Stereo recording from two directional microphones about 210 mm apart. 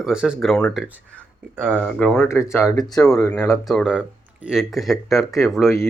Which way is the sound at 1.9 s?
5° left (ahead or behind).